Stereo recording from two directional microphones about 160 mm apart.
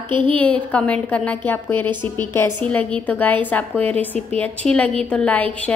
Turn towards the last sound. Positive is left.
turn(degrees=10)  # may be behind; listen again after turning